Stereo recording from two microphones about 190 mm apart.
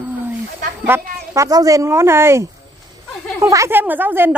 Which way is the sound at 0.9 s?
20° right (ahead or behind).